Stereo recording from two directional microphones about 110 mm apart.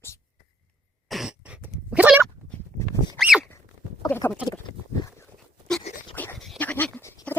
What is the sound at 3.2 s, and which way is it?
Dog, centre (ahead or behind).